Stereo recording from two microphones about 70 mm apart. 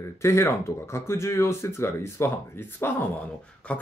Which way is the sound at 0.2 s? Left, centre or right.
Left.